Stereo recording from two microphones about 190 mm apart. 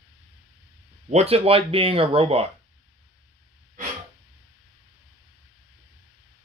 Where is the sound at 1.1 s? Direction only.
30° right (ahead or behind).